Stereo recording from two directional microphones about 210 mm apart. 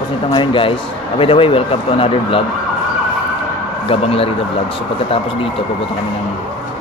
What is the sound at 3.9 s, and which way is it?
Speech, 25° left (ahead or behind).